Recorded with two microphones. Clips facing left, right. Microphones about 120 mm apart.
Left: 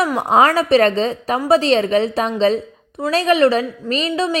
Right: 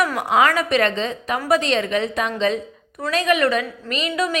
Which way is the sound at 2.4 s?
30° left (ahead or behind).